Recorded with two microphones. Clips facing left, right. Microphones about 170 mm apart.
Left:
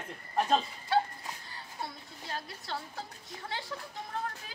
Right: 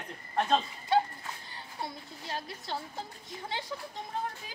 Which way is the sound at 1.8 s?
25° right (ahead or behind).